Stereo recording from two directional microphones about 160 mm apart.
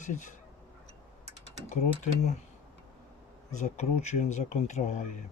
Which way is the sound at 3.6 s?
45° left (ahead or behind).